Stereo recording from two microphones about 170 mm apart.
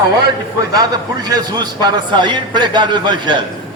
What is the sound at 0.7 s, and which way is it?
A man's voice, 20° right (ahead or behind).